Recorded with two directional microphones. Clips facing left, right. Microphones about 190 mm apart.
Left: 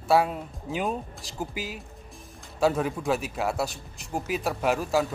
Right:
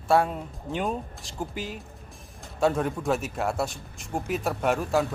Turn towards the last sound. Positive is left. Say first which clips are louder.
# even
turn(degrees=0)  # may be behind; listen again after turning